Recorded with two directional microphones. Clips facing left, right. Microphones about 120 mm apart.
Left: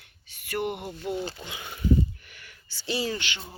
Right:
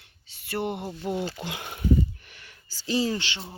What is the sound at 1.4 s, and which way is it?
Speech, 70° right (ahead or behind).